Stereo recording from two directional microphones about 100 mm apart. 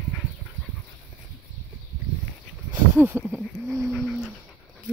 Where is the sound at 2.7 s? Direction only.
15° right (ahead or behind).